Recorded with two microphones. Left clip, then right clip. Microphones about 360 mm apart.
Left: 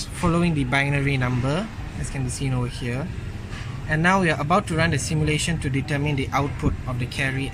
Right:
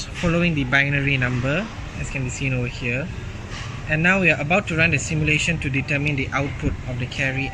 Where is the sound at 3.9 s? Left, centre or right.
Left.